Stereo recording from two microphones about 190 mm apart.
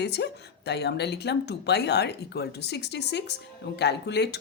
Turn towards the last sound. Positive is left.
turn(degrees=60)  # may be behind; listen again after turning